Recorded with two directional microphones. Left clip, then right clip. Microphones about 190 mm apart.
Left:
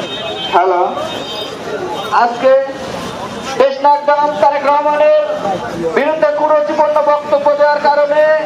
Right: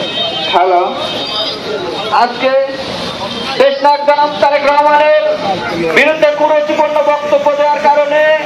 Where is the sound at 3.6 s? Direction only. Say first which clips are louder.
Right 1 dB; 30° left (ahead or behind).